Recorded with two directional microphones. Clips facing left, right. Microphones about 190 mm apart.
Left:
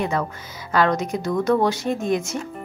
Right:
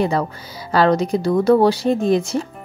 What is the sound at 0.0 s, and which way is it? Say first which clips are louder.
Speech: right 5 dB; 35° right (ahead or behind).